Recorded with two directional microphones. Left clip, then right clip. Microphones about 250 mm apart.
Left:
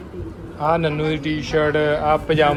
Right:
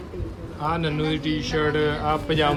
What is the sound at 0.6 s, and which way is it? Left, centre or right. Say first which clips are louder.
A man's voice: left 6 dB; centre.